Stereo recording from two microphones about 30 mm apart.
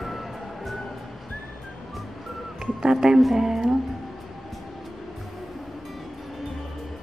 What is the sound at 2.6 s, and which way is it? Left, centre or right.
Speech, centre.